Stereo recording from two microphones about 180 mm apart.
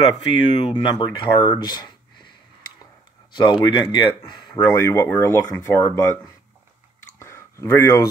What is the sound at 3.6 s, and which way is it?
Speech, 25° left (ahead or behind).